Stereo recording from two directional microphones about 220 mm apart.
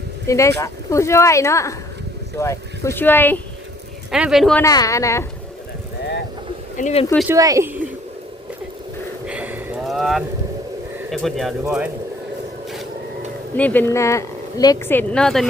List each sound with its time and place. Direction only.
0.3 s speech: 15° left (ahead or behind)
4.1 s speech: centre (ahead or behind)
4.6 s speech: 15° left (ahead or behind)
6.7 s speech: 30° left (ahead or behind)
7.3 s speech: 15° right (ahead or behind)
9.2 s a sound: 5° right (ahead or behind)
11.1 s speech: centre (ahead or behind)
13.6 s speech: 10° left (ahead or behind)